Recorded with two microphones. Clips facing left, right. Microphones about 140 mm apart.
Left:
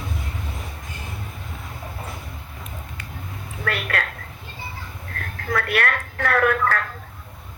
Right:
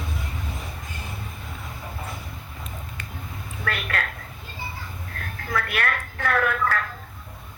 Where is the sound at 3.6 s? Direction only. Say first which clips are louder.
Left 3 dB; 40° left (ahead or behind).